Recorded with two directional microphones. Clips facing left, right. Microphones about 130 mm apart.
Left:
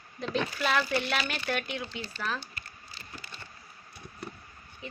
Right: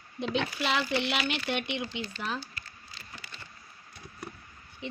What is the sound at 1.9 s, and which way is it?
Speech, 20° right (ahead or behind).